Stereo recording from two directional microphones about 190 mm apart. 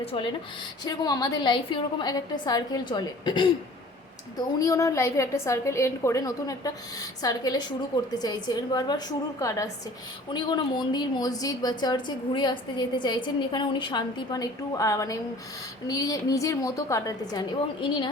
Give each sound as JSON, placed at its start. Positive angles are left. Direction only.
{"t": 0.0, "sound": "a woman's voice", "side_deg": 30}
{"t": 10.3, "sound": "a woman's voice", "side_deg": 25}